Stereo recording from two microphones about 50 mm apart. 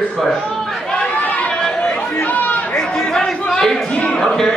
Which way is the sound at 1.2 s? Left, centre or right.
Left.